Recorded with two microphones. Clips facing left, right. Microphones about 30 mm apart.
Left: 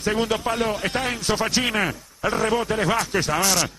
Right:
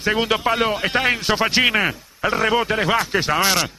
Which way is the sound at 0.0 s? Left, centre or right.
Right.